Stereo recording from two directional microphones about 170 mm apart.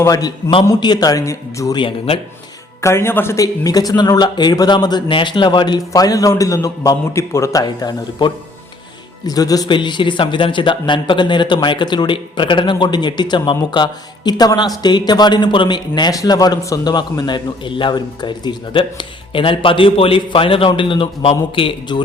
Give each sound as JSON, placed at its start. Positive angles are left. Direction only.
{"t": 0.0, "sound": "speech", "side_deg": 20}
{"t": 2.8, "sound": "speech", "side_deg": 15}